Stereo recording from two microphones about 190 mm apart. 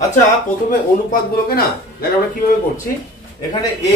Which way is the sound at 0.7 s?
50° left (ahead or behind).